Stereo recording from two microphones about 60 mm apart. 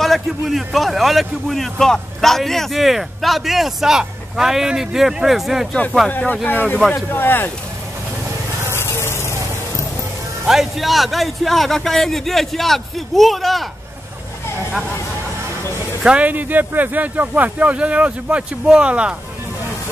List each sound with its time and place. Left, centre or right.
0.0 s a man's voice: centre
6.0 s speech: left
8.7 s vehicle: left
10.4 s a man's voice: centre
16.0 s speech: centre
16.3 s speech: right